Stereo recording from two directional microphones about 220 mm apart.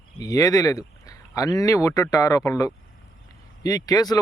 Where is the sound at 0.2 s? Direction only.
15° left (ahead or behind).